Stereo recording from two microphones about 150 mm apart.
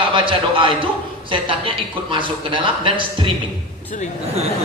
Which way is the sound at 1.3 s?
35° right (ahead or behind).